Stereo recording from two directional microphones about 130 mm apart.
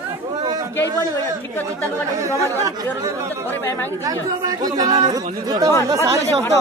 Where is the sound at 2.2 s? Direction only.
25° right (ahead or behind).